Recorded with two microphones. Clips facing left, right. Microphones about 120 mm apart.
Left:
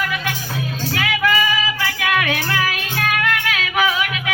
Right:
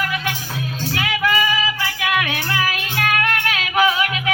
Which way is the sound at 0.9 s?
20° right (ahead or behind).